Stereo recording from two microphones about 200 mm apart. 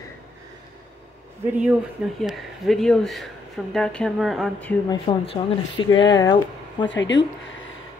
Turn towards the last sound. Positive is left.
turn(degrees=65)  # may be behind; listen again after turning